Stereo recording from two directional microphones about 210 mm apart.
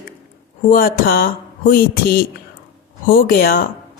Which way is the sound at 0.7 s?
45° left (ahead or behind).